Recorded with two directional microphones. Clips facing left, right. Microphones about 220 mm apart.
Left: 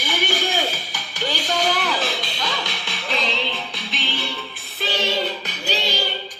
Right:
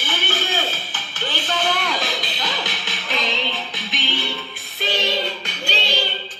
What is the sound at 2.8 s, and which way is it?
Music, centre (ahead or behind).